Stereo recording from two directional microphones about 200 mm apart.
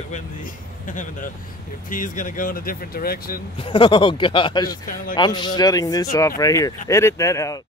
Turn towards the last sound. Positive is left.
turn(degrees=15)  # may be behind; listen again after turning